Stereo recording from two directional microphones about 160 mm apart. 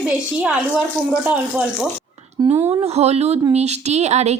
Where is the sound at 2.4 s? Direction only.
20° right (ahead or behind).